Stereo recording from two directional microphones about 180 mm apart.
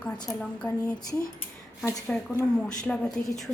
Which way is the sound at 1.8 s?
15° left (ahead or behind).